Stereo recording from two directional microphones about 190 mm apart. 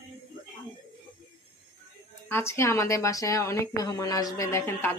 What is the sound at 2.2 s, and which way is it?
Speech, 15° left (ahead or behind).